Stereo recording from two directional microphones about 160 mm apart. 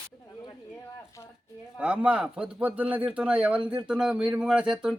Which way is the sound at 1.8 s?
10° right (ahead or behind).